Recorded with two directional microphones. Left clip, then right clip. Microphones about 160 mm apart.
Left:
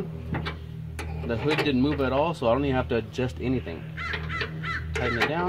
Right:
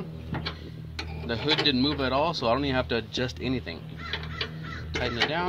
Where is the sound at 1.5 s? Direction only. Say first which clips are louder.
Right 1 dB; 30° left (ahead or behind).